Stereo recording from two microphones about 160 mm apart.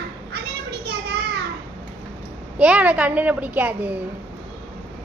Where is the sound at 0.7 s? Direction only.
80° right.